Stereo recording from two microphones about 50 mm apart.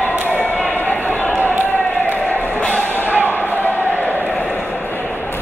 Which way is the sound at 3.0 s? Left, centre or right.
Right.